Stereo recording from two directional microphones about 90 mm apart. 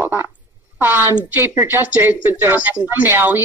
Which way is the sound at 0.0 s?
20° right (ahead or behind).